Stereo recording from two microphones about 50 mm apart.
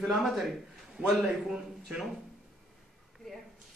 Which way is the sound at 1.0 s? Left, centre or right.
Centre.